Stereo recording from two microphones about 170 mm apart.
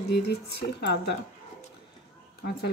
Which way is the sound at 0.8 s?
80° left.